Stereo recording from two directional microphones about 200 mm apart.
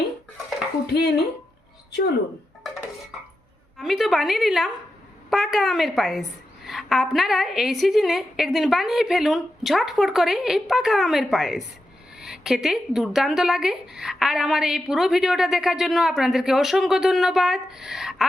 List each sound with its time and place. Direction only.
0.9 s speech: 55° left (ahead or behind)
3.8 s speech: centre (ahead or behind)